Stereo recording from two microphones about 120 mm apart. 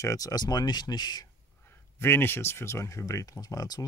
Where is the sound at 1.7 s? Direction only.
20° left (ahead or behind).